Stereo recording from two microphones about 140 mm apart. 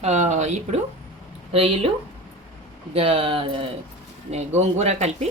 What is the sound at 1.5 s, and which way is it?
Speech, 45° right (ahead or behind).